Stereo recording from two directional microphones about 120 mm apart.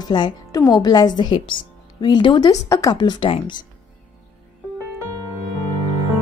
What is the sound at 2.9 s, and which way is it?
Speech, 35° left (ahead or behind).